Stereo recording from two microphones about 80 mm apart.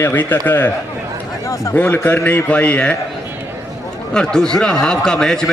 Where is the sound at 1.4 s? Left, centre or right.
Left.